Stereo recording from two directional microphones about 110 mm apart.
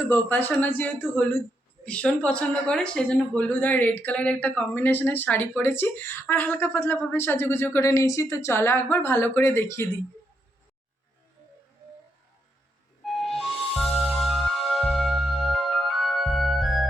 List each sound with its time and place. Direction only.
0.0 s speech: 20° left (ahead or behind)
13.1 s music: centre (ahead or behind)